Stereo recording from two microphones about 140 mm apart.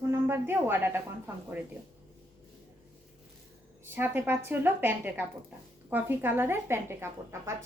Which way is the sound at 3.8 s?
15° right (ahead or behind).